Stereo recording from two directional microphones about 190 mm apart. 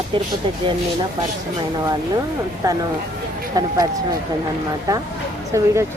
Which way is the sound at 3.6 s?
20° right (ahead or behind).